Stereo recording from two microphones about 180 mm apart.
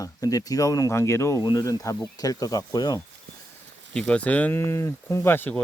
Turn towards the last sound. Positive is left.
turn(degrees=10)  # may be behind; listen again after turning